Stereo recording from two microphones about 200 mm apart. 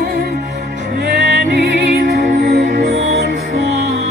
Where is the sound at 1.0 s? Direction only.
55° right (ahead or behind).